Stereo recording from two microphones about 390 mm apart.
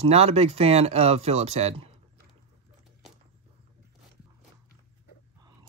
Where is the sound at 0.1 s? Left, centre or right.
Centre.